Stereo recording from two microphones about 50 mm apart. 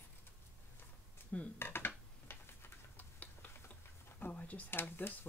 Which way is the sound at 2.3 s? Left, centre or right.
Left.